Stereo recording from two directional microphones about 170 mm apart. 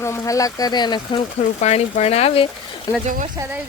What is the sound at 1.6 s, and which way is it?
Speech, 40° left (ahead or behind).